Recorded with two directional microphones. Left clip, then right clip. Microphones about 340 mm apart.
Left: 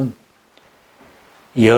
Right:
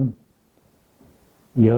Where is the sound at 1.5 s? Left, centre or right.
Centre.